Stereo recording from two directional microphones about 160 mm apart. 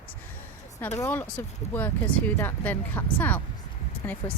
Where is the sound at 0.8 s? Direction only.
20° left (ahead or behind).